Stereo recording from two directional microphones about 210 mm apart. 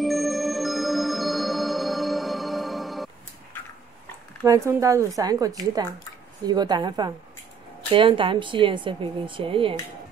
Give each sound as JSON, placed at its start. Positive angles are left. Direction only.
{"t": 0.0, "sound": "music", "side_deg": 0}
{"t": 4.5, "sound": "a woman's voice", "side_deg": -15}